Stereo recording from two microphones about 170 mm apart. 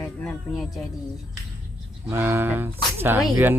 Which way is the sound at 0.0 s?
5° left (ahead or behind).